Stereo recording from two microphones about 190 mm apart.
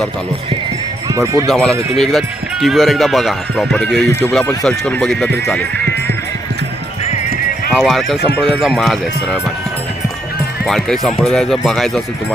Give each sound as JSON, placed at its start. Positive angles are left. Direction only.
{"t": 1.1, "sound": "speech", "side_deg": -15}
{"t": 1.5, "sound": "speech", "side_deg": 0}
{"t": 7.8, "sound": "speech", "side_deg": 0}
{"t": 10.7, "sound": "speech", "side_deg": 0}